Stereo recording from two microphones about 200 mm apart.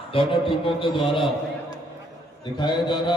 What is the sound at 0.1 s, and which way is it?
A man's voice, 25° left (ahead or behind).